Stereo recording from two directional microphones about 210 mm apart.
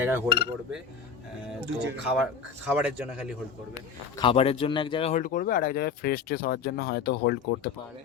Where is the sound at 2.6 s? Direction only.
5° right (ahead or behind).